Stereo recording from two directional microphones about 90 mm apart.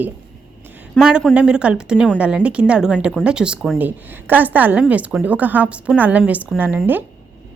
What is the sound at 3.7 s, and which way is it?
A woman's voice, 20° right (ahead or behind).